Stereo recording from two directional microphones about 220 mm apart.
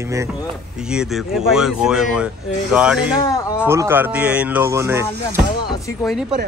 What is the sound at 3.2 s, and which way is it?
Speech, 15° left (ahead or behind).